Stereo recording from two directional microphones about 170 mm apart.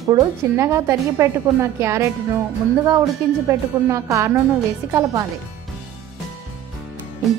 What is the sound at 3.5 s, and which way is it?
A woman's voice, 15° right (ahead or behind).